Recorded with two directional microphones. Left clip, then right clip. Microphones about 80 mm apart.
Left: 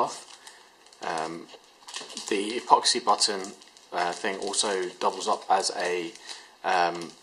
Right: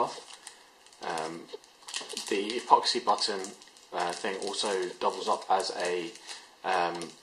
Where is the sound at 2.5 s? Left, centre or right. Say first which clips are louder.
Left 2 dB; left.